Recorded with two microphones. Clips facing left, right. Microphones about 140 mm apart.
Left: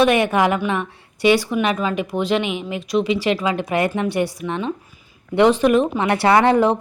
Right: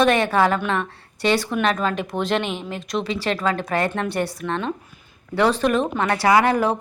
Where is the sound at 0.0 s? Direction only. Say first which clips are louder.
Left 2 dB; 15° left (ahead or behind).